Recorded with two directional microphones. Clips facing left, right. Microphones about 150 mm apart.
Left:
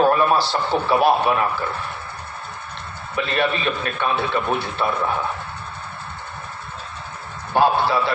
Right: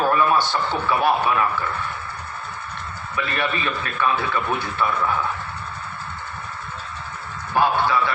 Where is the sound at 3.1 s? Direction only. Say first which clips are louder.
Left 4 dB; 25° left (ahead or behind).